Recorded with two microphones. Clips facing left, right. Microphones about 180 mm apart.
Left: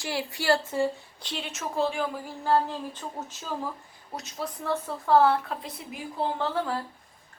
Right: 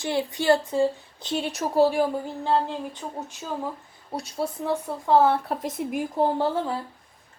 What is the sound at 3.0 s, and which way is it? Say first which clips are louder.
Speech: right 3 dB; 15° right (ahead or behind).